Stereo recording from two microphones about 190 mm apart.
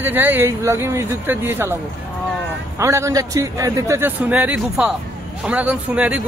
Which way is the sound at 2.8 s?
15° right (ahead or behind).